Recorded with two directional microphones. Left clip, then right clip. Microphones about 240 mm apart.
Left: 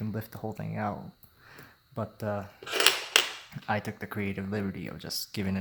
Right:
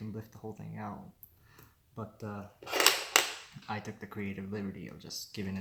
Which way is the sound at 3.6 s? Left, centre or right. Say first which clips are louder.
Left 9 dB; left.